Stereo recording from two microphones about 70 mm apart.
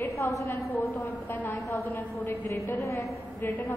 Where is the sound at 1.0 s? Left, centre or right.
Left.